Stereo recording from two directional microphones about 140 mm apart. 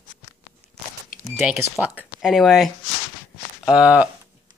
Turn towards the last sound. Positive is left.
turn(degrees=-10)  # may be behind; listen again after turning